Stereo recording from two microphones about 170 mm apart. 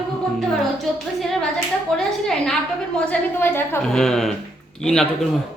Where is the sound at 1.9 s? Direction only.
5° left (ahead or behind).